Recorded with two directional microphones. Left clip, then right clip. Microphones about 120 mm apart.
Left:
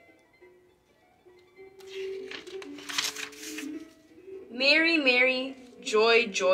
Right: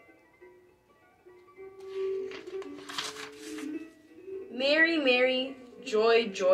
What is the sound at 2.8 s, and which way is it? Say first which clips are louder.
Music: left 5 dB; 15° right (ahead or behind).